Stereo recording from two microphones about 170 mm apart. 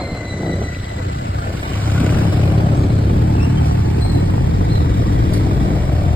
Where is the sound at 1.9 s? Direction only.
10° left (ahead or behind).